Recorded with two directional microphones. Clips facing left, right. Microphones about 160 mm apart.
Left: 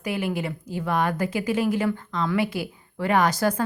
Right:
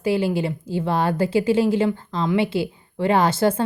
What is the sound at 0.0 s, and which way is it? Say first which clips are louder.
Speech: right 6 dB; 30° right (ahead or behind).